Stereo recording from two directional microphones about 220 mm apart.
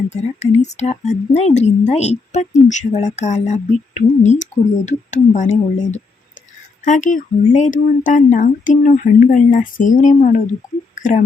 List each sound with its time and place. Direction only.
0.1 s speech: 30° left (ahead or behind)
10.9 s whispering: 35° left (ahead or behind)